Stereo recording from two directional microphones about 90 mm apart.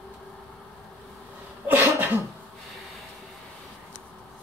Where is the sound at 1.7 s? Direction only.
20° right (ahead or behind).